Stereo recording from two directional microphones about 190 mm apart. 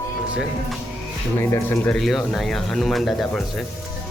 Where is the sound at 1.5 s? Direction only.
10° left (ahead or behind).